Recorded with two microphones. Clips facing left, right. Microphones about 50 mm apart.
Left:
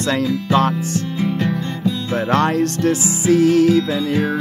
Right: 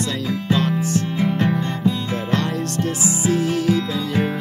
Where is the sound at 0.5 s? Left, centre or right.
Left.